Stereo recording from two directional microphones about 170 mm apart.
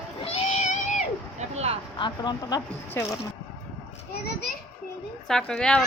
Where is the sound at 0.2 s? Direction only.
40° left (ahead or behind).